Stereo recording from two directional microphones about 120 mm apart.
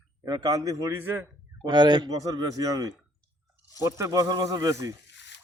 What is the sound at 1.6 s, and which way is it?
A man's voice, 40° right (ahead or behind).